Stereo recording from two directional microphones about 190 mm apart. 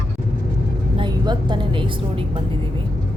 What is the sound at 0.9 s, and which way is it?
A woman's voice, 20° right (ahead or behind).